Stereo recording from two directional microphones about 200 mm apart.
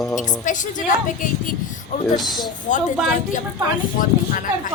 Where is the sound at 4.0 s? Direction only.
45° left (ahead or behind).